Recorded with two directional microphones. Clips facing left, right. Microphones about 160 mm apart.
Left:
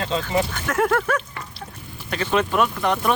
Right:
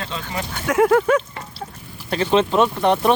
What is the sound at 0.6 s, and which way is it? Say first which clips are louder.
Speech: right 10 dB; 10° right (ahead or behind).